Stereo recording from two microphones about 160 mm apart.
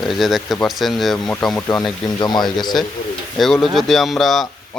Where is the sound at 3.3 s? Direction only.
Centre (ahead or behind).